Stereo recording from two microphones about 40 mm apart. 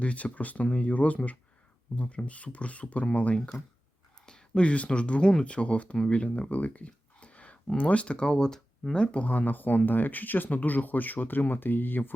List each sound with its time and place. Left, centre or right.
0.0 s speech: left
4.3 s a sound: centre
4.6 s speech: left
6.1 s a sound: left
7.8 s speech: left
8.3 s speech: centre
9.2 s speech: left